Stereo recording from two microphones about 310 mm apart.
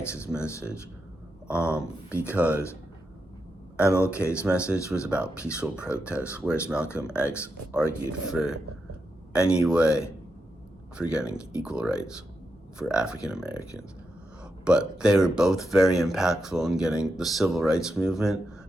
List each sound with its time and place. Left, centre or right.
0.3 s speech: centre
1.5 s speech: centre
3.8 s speech: centre
4.4 s speech: centre
7.2 s speech: centre
14.6 s speech: centre